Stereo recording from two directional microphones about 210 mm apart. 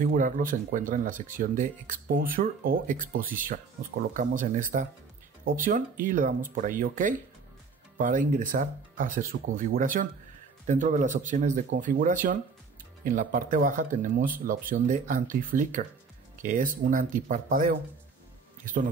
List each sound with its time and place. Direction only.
0.0 s speech: 40° right (ahead or behind)